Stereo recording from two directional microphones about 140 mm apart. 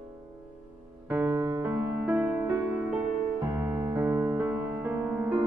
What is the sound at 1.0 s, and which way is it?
Music, 15° right (ahead or behind).